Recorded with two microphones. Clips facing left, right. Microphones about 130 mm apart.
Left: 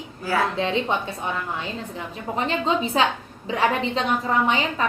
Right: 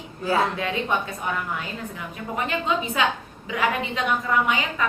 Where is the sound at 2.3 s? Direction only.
30° left (ahead or behind).